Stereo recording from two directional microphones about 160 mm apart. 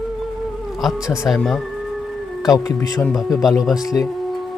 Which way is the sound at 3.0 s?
Centre (ahead or behind).